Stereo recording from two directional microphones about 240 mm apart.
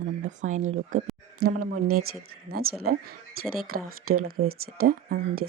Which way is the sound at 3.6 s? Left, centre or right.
Right.